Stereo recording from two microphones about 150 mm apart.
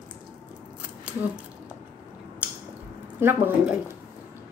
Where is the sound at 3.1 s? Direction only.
15° right (ahead or behind).